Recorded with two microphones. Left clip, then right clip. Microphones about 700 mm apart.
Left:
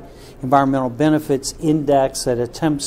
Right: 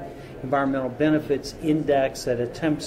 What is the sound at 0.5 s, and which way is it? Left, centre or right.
A man's voice, left.